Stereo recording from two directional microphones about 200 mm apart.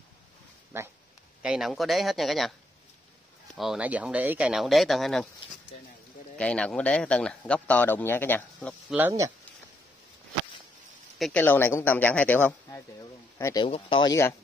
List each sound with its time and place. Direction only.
0.7 s speech: 10° right (ahead or behind)
3.5 s speech: 5° right (ahead or behind)
6.3 s speech: 5° left (ahead or behind)
8.9 s speech: 10° right (ahead or behind)
11.1 s speech: 5° left (ahead or behind)
13.7 s speech: 25° left (ahead or behind)